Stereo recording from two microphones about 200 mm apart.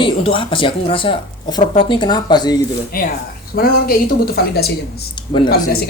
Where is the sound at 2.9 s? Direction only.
45° left (ahead or behind).